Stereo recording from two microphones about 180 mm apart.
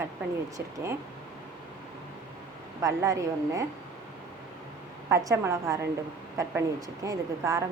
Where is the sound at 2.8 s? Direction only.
20° right (ahead or behind).